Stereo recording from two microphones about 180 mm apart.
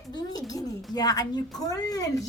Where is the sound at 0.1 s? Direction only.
20° left (ahead or behind).